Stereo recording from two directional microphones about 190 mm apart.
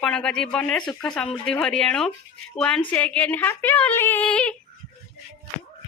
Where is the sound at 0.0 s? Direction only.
5° left (ahead or behind).